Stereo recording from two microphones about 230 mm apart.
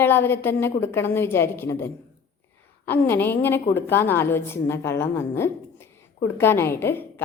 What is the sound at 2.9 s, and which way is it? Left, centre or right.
A woman's voice, centre.